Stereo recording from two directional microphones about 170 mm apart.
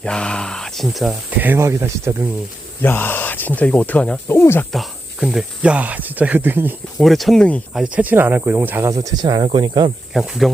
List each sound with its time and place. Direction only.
0.0 s speech: 5° left (ahead or behind)
1.4 s speech: 15° right (ahead or behind)
2.8 s speech: 10° left (ahead or behind)
4.7 s speech: centre (ahead or behind)
7.0 s speech: centre (ahead or behind)
7.7 s speech: 5° right (ahead or behind); by 9.9 s 25° right (ahead or behind)
10.2 s speech: centre (ahead or behind)